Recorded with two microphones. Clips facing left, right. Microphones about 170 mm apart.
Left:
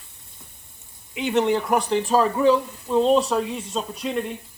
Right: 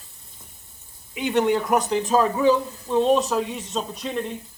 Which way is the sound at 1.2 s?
Centre (ahead or behind).